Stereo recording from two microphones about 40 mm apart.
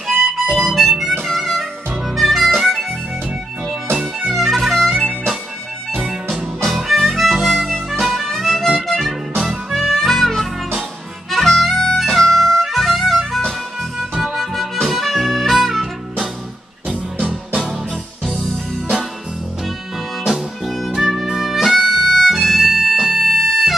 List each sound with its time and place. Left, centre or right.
0.1 s harmonica: centre
1.2 s music: centre
2.1 s harmonica: centre
4.3 s music: centre
6.6 s harmonica: centre
9.4 s music: centre
11.2 s harmonica: centre
12.0 s music: centre
14.2 s harmonica: centre
14.9 s music: centre
16.8 s music: right
20.6 s music: centre
23.2 s bagpipes: centre